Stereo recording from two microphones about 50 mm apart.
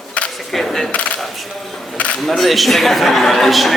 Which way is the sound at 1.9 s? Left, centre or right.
Left.